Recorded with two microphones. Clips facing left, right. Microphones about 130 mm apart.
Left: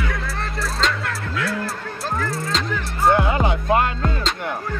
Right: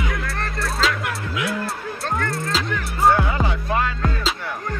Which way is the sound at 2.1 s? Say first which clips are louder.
Even; centre (ahead or behind).